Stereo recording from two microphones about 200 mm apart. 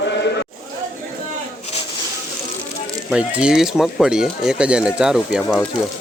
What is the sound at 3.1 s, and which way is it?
Speech, 5° right (ahead or behind).